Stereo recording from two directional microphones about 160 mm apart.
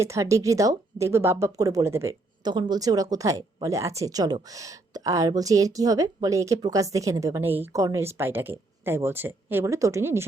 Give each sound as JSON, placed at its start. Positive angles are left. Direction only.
{"t": 0.0, "sound": "speech", "side_deg": -20}